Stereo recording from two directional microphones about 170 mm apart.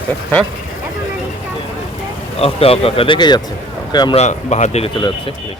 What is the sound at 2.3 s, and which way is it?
Speech, 35° left (ahead or behind).